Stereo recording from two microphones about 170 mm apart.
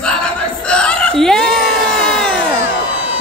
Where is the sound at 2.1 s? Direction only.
5° left (ahead or behind).